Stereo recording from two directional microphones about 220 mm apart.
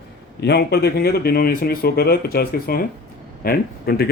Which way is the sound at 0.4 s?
50° left (ahead or behind).